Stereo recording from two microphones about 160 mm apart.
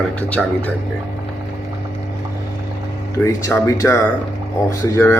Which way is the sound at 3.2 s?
15° left (ahead or behind).